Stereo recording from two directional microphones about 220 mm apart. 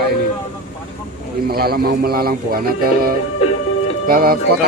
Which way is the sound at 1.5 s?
45° right (ahead or behind).